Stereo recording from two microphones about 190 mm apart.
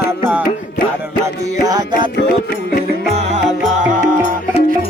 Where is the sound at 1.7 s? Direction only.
20° right (ahead or behind).